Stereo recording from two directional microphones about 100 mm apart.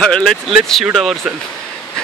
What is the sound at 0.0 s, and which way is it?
Speech, 10° left (ahead or behind).